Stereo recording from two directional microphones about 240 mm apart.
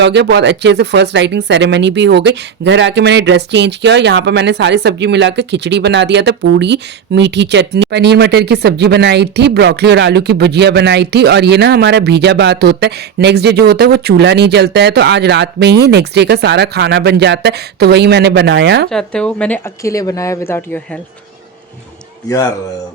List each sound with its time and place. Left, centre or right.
0.0 s speech: right
18.9 s speech: centre